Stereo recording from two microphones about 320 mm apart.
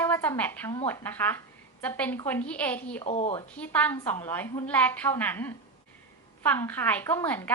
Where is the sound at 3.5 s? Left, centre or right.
Centre.